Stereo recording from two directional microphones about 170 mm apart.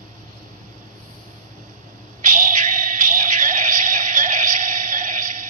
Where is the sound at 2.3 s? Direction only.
45° right (ahead or behind).